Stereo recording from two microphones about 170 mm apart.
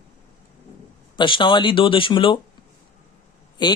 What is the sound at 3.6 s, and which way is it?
Speech, 25° left (ahead or behind).